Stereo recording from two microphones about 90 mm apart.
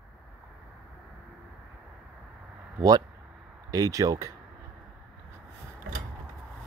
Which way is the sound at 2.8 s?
40° right (ahead or behind).